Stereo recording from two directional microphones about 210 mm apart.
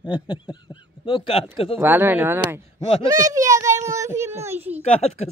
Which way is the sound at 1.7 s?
10° right (ahead or behind).